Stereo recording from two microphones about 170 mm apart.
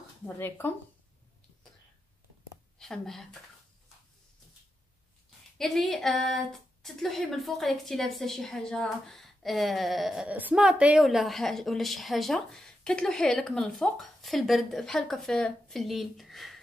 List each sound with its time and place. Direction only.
0.4 s speech: 10° left (ahead or behind)
2.8 s a woman's voice: centre (ahead or behind)
5.6 s a woman's voice: centre (ahead or behind)